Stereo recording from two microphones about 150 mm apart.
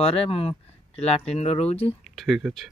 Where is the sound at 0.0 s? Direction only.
40° left (ahead or behind).